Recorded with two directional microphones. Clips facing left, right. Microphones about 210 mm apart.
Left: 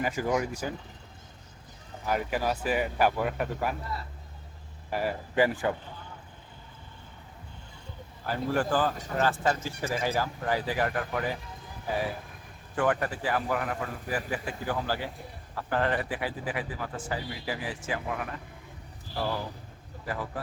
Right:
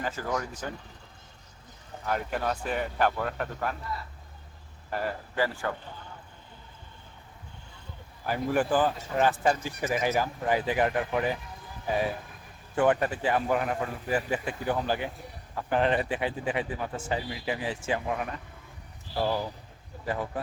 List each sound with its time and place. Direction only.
0.0 s speech: 15° left (ahead or behind)
2.0 s speech: 5° left (ahead or behind)
4.9 s speech: 5° left (ahead or behind)
8.3 s speech: 15° right (ahead or behind)
12.7 s speech: 20° right (ahead or behind)
20.1 s speech: 25° right (ahead or behind)